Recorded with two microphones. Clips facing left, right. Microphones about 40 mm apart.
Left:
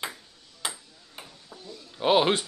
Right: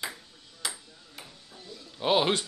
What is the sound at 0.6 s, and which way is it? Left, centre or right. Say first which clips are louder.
Ping: left 2 dB; left.